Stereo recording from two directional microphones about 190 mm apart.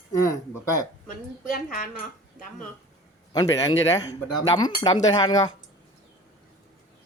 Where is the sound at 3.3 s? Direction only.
20° left (ahead or behind).